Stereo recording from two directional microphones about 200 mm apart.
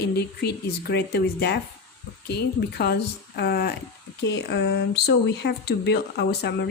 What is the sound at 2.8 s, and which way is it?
A woman's voice, 55° left (ahead or behind).